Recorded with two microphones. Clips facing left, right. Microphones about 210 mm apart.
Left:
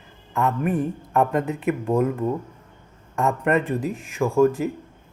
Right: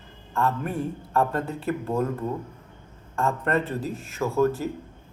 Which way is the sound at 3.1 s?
15° left (ahead or behind).